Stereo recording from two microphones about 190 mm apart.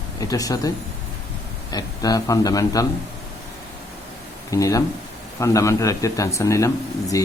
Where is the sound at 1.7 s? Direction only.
20° left (ahead or behind).